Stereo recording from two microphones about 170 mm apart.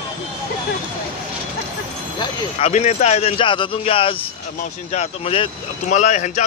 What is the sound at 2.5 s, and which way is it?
Speech, 40° left (ahead or behind).